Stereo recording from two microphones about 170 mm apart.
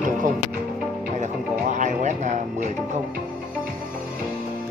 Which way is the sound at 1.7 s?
45° right (ahead or behind).